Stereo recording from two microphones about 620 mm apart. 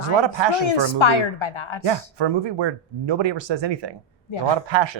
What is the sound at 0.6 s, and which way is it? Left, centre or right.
A woman's voice, left.